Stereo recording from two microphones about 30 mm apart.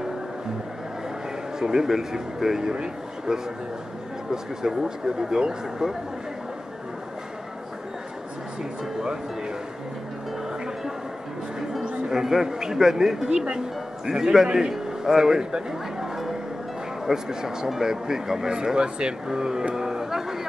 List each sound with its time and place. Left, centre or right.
1.6 s speech: centre
2.7 s speech: right
12.1 s speech: centre
16.0 s music: centre
17.0 s speech: centre
19.2 s speech: right
19.7 s a sound: centre